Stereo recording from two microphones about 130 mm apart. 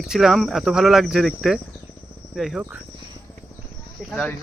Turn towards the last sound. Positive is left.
turn(degrees=5)  # may be behind; listen again after turning